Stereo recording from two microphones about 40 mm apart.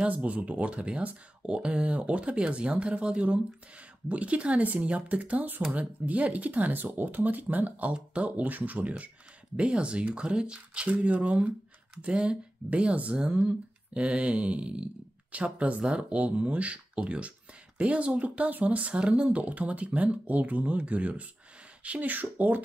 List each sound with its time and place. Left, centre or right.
0.1 s speech: right
7.9 s speech: right
8.4 s speech: right
9.6 s speech: right
22.1 s speech: right